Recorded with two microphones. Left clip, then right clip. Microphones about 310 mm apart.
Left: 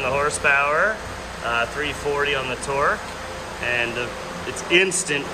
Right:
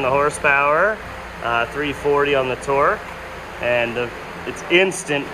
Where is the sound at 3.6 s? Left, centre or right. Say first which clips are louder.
Right 4 dB; left.